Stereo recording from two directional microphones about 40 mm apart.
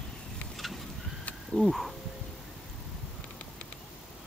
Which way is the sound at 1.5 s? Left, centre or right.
Centre.